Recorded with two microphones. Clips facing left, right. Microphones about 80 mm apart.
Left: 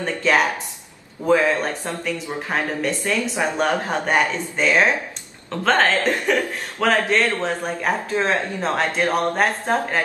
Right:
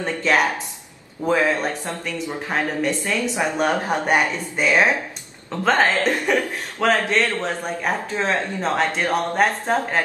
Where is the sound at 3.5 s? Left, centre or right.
Centre.